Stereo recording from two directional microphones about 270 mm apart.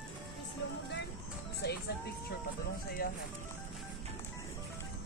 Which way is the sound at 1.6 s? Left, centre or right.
Left.